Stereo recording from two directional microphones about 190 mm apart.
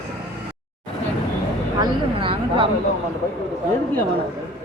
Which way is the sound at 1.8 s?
25° right (ahead or behind).